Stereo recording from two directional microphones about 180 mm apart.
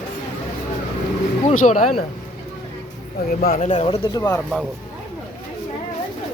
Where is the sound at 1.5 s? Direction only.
45° left (ahead or behind).